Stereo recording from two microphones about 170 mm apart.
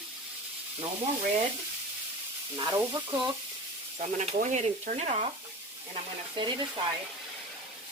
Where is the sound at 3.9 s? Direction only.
40° right (ahead or behind).